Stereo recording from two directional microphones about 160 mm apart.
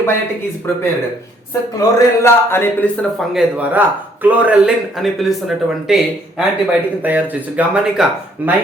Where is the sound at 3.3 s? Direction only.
5° right (ahead or behind).